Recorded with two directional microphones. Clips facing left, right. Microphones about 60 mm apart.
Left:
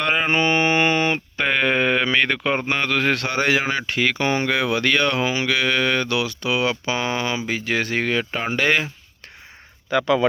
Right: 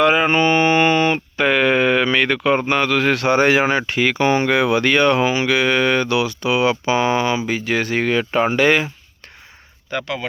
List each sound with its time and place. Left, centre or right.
0.0 s mantra: centre
3.2 s speech: right
7.4 s speech: centre